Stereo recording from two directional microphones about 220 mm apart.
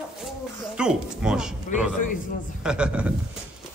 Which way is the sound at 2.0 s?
35° left (ahead or behind).